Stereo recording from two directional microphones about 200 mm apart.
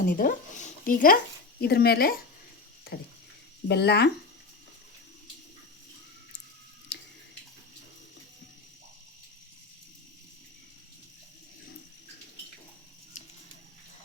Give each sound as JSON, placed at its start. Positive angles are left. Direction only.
{"t": 0.0, "sound": "speech", "side_deg": 45}
{"t": 3.7, "sound": "speech", "side_deg": 55}
{"t": 6.9, "sound": "a sound", "side_deg": 60}